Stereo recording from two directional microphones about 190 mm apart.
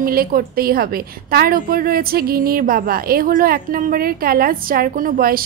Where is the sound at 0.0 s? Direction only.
50° right (ahead or behind).